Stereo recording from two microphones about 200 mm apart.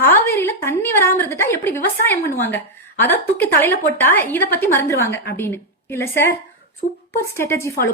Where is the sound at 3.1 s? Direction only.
10° left (ahead or behind).